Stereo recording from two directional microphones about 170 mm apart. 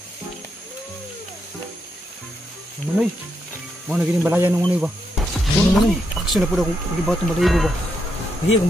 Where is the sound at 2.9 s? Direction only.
10° right (ahead or behind).